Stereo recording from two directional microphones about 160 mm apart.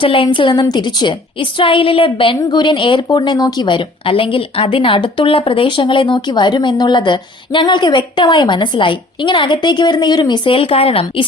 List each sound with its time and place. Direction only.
0.0 s a woman's voice: 35° left (ahead or behind)